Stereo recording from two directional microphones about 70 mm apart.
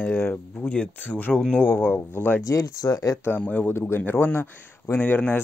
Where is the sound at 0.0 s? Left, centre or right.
Left.